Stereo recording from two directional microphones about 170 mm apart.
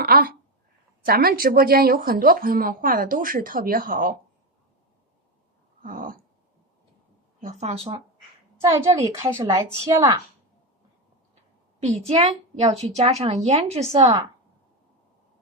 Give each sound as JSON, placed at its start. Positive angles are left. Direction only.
{"t": 0.0, "sound": "a woman's voice", "side_deg": -60}
{"t": 5.8, "sound": "throat clearing", "side_deg": -55}
{"t": 7.4, "sound": "a woman's voice", "side_deg": -40}
{"t": 8.8, "sound": "a woman's voice", "side_deg": -15}
{"t": 12.0, "sound": "a woman's voice", "side_deg": -40}